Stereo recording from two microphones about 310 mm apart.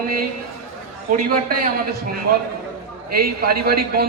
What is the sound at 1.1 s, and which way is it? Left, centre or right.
Speech, right.